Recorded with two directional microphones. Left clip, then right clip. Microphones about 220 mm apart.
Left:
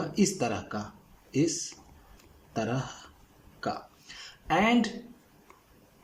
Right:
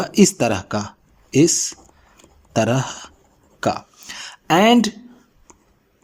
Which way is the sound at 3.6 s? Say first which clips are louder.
Right 12 dB; 45° right (ahead or behind).